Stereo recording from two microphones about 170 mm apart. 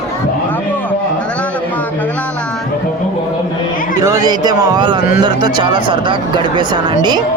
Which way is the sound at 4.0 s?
20° right (ahead or behind).